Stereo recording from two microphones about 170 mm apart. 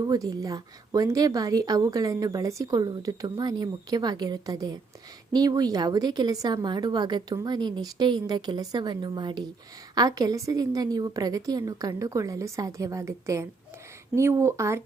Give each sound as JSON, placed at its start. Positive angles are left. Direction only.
{"t": 0.0, "sound": "a woman's voice", "side_deg": -20}